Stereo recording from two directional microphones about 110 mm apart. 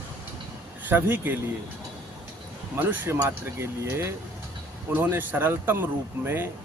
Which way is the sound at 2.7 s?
15° right (ahead or behind).